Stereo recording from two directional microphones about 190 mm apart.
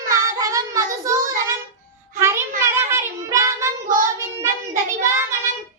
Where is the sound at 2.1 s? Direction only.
15° right (ahead or behind).